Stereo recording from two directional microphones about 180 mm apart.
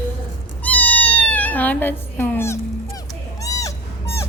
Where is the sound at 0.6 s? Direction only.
10° left (ahead or behind).